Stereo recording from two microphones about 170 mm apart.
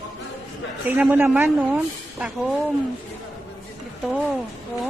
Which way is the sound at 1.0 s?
10° right (ahead or behind).